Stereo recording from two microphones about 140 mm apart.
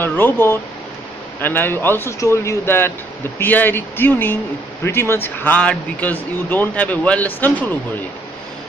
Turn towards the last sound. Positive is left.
turn(degrees=15)  # may be behind; listen again after turning